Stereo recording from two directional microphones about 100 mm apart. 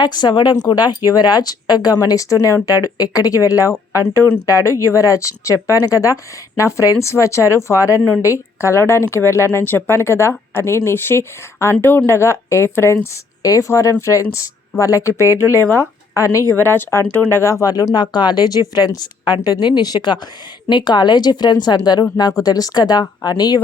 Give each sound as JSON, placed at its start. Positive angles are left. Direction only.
{"t": 0.0, "sound": "speech", "side_deg": 45}
{"t": 4.1, "sound": "speech", "side_deg": 25}
{"t": 15.3, "sound": "speech", "side_deg": -25}
{"t": 15.6, "sound": "a woman's voice", "side_deg": 25}